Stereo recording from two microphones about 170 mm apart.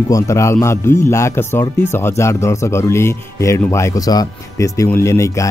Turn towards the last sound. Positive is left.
turn(degrees=15)  # may be behind; listen again after turning